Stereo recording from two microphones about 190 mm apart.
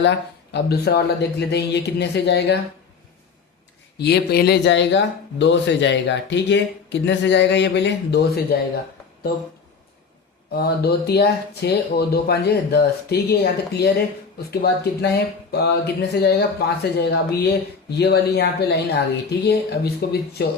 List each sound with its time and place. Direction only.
0.0 s speech: 65° left (ahead or behind)
3.9 s speech: 60° left (ahead or behind)
10.5 s speech: 55° left (ahead or behind)